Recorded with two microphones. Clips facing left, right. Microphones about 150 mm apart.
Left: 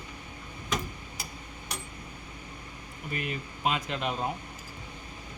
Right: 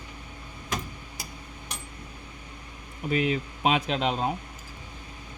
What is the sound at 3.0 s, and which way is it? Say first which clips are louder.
Speech: right 9 dB; 85° right.